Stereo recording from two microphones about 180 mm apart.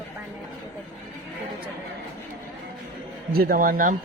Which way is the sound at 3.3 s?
60° right (ahead or behind).